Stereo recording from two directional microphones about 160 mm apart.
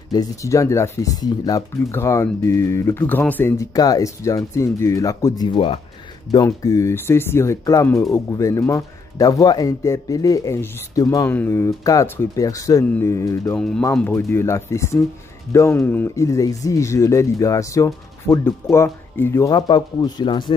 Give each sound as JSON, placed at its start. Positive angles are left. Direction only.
{"t": 0.1, "sound": "speech", "side_deg": 20}
{"t": 5.4, "sound": "speech", "side_deg": 30}
{"t": 6.3, "sound": "speech", "side_deg": 20}
{"t": 13.6, "sound": "speech", "side_deg": 5}